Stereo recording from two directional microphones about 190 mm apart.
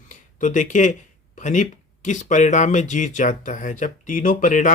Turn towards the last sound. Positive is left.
turn(degrees=40)  # may be behind; listen again after turning